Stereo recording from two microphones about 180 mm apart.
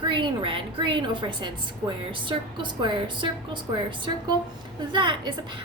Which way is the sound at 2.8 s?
25° right (ahead or behind).